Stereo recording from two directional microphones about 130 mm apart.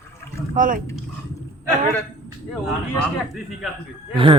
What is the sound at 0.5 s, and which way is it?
Speech, 90° right.